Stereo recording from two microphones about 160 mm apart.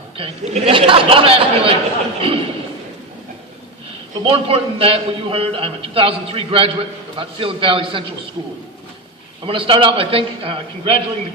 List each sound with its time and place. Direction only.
0.2 s a man's voice: 35° right (ahead or behind)
4.2 s a man's voice: 35° right (ahead or behind)
9.5 s a man's voice: 35° right (ahead or behind)